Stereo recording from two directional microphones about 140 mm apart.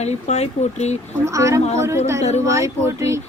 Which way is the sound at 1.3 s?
20° right (ahead or behind).